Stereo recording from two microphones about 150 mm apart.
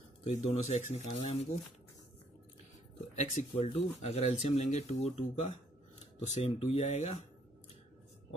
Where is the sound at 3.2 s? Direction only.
45° left (ahead or behind).